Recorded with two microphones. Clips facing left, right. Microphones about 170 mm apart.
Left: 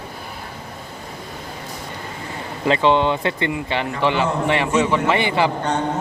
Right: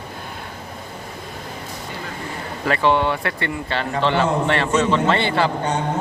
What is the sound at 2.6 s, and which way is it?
A man's voice, 20° left (ahead or behind).